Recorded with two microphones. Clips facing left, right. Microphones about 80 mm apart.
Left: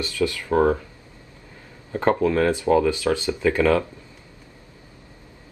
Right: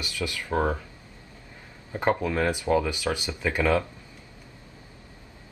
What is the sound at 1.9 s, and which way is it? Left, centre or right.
Speech, centre.